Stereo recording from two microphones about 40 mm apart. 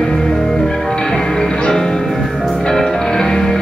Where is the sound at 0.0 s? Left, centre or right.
Centre.